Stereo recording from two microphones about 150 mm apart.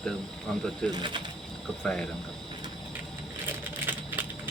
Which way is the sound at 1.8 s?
5° left (ahead or behind).